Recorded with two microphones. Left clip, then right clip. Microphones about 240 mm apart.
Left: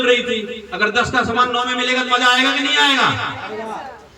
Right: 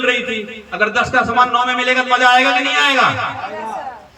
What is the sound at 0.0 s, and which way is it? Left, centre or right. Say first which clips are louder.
Speech: left 1 dB; centre.